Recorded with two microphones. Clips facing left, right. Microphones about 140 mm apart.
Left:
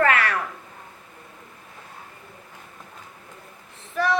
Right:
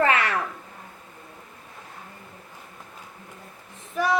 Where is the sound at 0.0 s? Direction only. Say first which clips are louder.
Left 1 dB; 25° right (ahead or behind).